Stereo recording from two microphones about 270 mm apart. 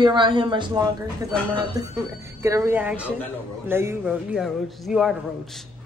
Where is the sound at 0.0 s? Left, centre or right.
Centre.